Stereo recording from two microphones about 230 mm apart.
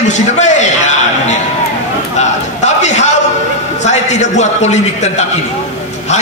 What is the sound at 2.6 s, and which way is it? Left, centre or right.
A man's voice, left.